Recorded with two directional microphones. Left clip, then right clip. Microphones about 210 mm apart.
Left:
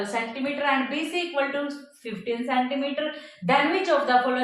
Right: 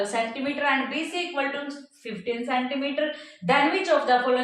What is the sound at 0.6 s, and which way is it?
A woman's voice, 20° left (ahead or behind).